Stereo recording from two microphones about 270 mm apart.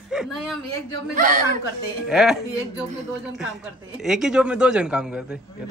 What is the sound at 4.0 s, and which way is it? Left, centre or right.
Speech, centre.